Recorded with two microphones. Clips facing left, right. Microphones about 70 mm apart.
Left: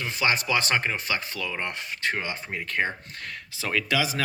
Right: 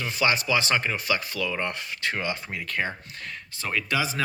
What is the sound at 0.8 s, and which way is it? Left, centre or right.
Speech, left.